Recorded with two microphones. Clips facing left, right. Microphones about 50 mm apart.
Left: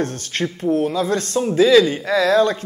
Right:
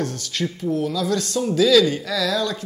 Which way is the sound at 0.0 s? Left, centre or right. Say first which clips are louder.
Left 3 dB; left.